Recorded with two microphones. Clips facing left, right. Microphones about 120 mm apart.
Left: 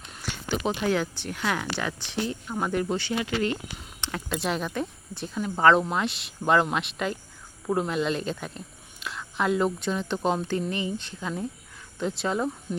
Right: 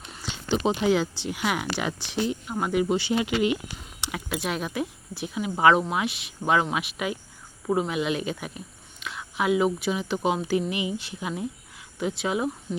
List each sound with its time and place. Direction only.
0.7 s speech: 15° right (ahead or behind)